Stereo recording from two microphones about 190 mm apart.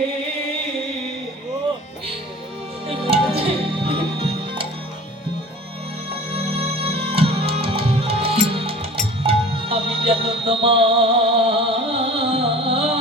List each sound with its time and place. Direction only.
2.9 s music: 30° right (ahead or behind)
6.3 s music: 30° right (ahead or behind)